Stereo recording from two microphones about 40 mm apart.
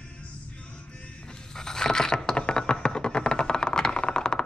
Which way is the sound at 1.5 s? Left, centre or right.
Centre.